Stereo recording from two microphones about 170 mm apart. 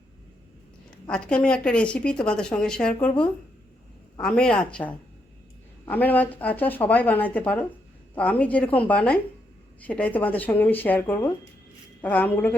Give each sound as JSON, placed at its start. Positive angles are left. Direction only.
{"t": 1.0, "sound": "speech", "side_deg": 5}